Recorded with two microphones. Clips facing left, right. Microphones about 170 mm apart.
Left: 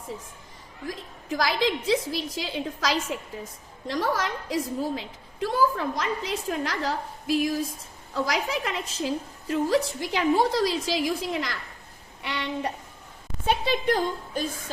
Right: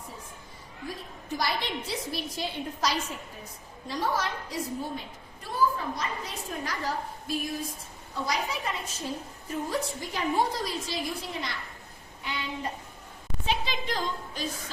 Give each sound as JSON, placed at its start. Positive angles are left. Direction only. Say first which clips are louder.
{"t": 0.9, "sound": "a woman's voice", "louder": "left 4 dB", "side_deg": 90}
{"t": 12.2, "sound": "speech", "louder": "left 5 dB", "side_deg": 75}
{"t": 13.4, "sound": "a woman's voice", "louder": "left 7 dB", "side_deg": 55}